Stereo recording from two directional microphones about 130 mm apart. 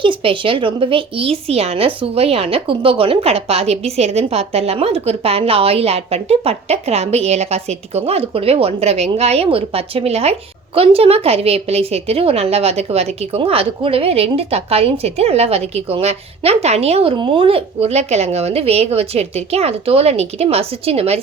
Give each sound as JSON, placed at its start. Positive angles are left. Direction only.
{"t": 0.0, "sound": "a woman's voice", "side_deg": -40}